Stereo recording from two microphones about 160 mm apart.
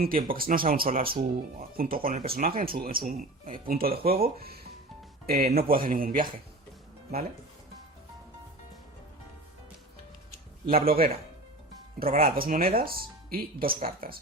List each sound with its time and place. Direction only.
0.0 s speech: 65° right (ahead or behind)
10.7 s a man's voice: 65° right (ahead or behind)